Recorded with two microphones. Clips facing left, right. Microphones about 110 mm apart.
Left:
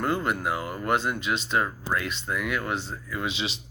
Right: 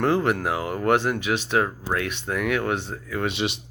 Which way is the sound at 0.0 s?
75° right (ahead or behind).